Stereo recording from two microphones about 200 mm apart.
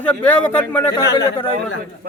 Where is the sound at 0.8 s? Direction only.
20° left (ahead or behind).